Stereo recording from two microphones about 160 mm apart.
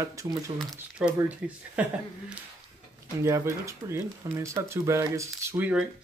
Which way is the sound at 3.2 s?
20° right (ahead or behind).